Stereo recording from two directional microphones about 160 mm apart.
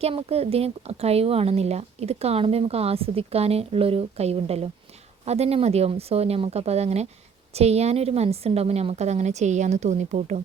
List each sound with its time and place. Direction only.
0.0 s a woman's voice: 40° right (ahead or behind)